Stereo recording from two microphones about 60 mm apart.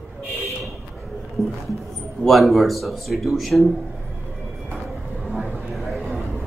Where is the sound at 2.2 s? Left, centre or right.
Centre.